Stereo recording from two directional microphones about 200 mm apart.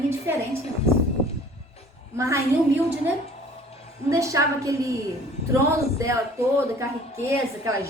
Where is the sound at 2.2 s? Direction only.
15° right (ahead or behind).